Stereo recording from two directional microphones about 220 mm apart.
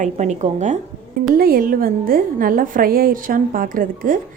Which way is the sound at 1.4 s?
40° right (ahead or behind).